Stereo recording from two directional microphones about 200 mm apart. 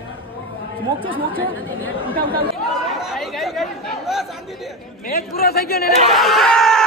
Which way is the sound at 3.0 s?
Centre (ahead or behind).